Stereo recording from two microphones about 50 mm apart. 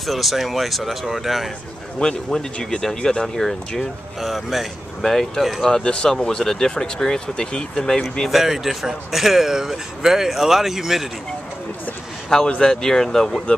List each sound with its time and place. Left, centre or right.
0.0 s speech: centre
2.0 s speech: centre
5.7 s speech: centre
8.3 s speech: centre
12.4 s speech: centre